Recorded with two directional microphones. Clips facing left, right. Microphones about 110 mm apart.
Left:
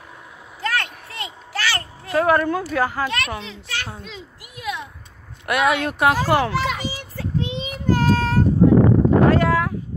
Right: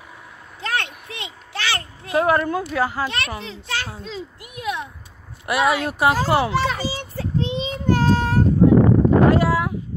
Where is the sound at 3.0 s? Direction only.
30° right (ahead or behind).